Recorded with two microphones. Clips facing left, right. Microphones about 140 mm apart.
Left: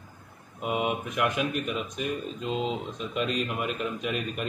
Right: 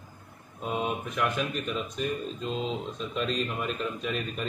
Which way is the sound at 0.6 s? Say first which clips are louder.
Left 2 dB; 10° left (ahead or behind).